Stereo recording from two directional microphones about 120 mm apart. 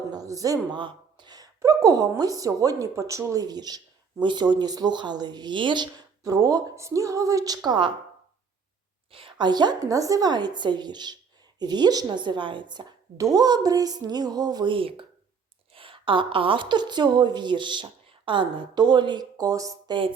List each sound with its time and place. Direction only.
0.1 s speech: 30° right (ahead or behind)
0.8 s a woman's voice: 40° right (ahead or behind)
9.1 s speech: 40° right (ahead or behind)